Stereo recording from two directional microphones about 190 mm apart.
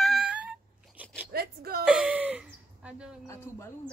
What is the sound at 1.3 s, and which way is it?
Speech, 55° right (ahead or behind).